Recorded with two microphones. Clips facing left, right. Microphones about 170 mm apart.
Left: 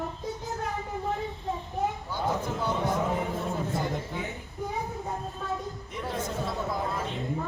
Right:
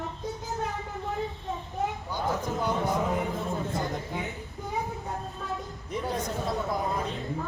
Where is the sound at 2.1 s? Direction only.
15° right (ahead or behind).